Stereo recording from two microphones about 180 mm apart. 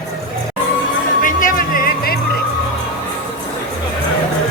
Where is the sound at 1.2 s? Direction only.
50° left (ahead or behind).